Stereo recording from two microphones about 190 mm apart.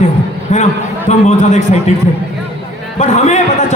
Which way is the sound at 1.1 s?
35° left (ahead or behind).